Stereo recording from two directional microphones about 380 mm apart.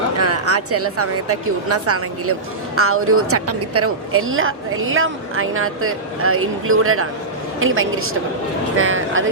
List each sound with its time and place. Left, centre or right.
0.2 s a woman's voice: right